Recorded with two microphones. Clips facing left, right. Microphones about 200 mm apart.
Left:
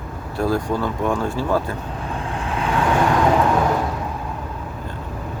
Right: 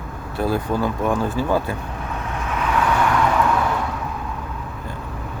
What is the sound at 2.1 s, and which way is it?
Vehicle, 30° left (ahead or behind).